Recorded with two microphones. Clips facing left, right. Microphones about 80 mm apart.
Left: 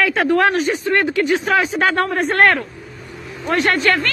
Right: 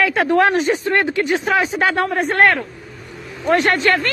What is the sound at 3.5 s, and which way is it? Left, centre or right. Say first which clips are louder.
Speech: right 1 dB; right.